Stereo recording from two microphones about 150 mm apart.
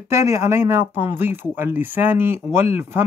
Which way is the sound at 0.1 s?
20° right (ahead or behind).